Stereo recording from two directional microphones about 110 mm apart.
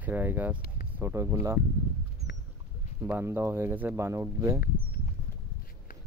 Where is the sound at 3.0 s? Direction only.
20° right (ahead or behind).